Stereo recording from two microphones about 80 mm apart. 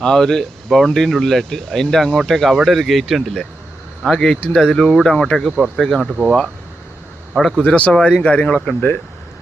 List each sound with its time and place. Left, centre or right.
0.0 s speech: centre
5.5 s speech: centre
5.7 s speech: centre
7.6 s speech: centre